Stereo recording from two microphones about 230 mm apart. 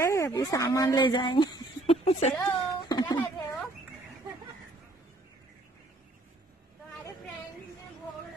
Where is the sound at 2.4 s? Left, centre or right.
Centre.